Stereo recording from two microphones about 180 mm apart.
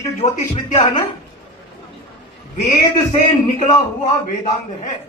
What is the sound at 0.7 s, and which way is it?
Speech, 20° left (ahead or behind).